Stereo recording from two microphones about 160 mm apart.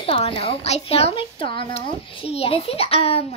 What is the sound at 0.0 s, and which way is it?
A child's voice, 35° left (ahead or behind).